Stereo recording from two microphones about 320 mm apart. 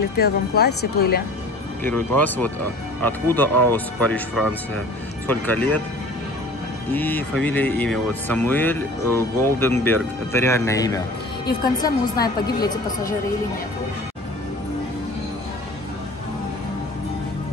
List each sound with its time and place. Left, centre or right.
0.2 s speech: left
1.8 s speech: centre
6.9 s a woman's voice: centre